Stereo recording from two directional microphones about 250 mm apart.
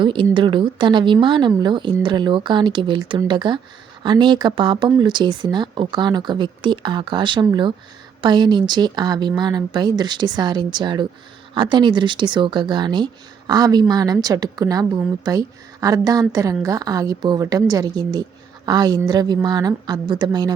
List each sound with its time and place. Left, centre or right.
0.0 s a woman's voice: centre